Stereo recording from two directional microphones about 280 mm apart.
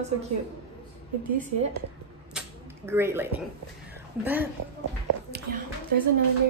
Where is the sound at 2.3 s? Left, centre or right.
Centre.